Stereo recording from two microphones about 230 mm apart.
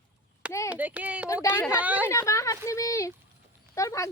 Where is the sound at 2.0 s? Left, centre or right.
Centre.